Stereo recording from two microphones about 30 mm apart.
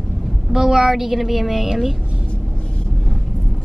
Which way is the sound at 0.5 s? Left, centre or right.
Centre.